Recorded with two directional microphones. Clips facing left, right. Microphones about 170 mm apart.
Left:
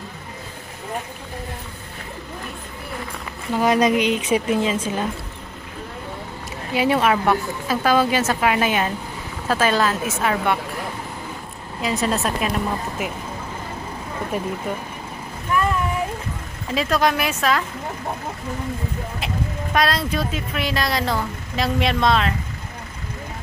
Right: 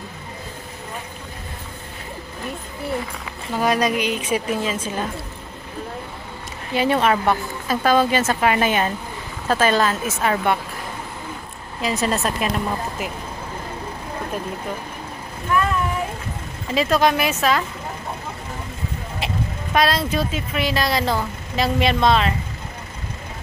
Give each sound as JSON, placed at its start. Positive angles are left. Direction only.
{"t": 3.5, "sound": "speech", "side_deg": 20}
{"t": 6.7, "sound": "a woman's voice", "side_deg": 5}
{"t": 11.8, "sound": "a woman's voice", "side_deg": 0}
{"t": 16.7, "sound": "a woman's voice", "side_deg": 0}
{"t": 19.1, "sound": "speech", "side_deg": 0}